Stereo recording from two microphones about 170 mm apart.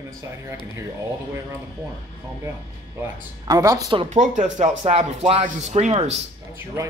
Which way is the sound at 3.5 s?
20° right (ahead or behind).